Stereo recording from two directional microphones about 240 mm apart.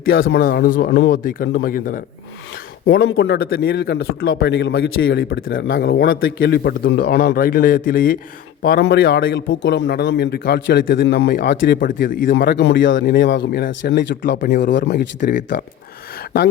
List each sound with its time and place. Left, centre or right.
0.2 s a man's voice: left
2.8 s a man's voice: left